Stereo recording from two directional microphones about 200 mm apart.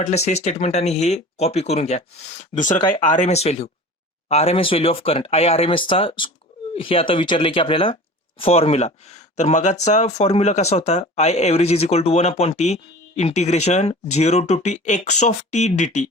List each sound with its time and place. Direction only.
0.0 s speech: 35° left (ahead or behind)